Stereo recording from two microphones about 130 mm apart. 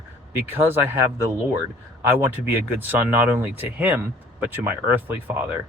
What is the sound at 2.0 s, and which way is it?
Speech, 15° right (ahead or behind).